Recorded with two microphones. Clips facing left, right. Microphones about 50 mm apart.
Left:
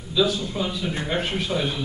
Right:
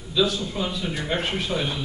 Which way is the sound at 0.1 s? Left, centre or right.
Centre.